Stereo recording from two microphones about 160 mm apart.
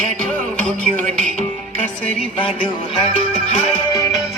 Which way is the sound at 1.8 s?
10° left (ahead or behind).